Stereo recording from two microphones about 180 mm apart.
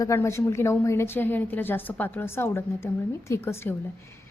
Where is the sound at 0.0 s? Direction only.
15° left (ahead or behind).